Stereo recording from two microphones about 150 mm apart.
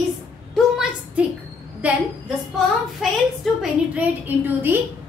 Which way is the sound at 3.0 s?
Centre (ahead or behind).